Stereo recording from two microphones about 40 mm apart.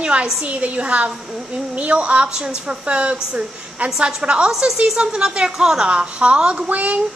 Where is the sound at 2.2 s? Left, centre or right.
Centre.